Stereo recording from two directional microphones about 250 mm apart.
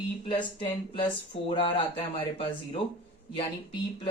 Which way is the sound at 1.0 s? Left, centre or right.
Centre.